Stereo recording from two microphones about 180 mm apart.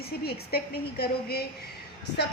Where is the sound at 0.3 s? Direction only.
60° left (ahead or behind).